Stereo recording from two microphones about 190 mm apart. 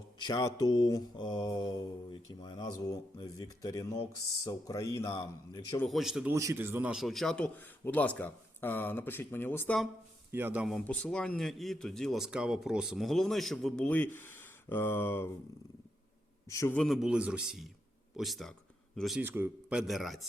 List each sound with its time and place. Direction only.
0.2 s speech: 20° left (ahead or behind)
5.8 s speech: centre (ahead or behind)
6.3 s a man's voice: 15° right (ahead or behind); by 9.8 s 10° left (ahead or behind)
10.3 s a man's voice: 10° right (ahead or behind)
10.8 s speech: 5° left (ahead or behind)
16.5 s a man's voice: 15° left (ahead or behind)
16.8 s speech: centre (ahead or behind)
19.2 s a man's voice: 10° right (ahead or behind)
19.9 s speech: centre (ahead or behind)